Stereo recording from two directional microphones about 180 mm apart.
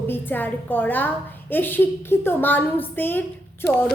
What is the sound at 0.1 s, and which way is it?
A woman's voice, 10° left (ahead or behind).